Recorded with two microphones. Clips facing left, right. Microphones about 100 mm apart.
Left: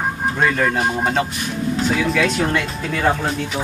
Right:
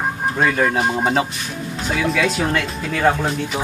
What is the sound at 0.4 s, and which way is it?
Speech, 10° right (ahead or behind).